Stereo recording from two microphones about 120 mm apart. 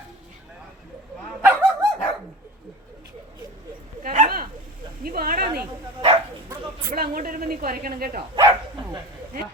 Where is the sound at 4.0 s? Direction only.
90° right.